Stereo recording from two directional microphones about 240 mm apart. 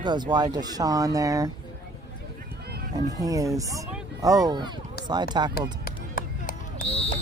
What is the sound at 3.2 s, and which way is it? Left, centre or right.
Speech, centre.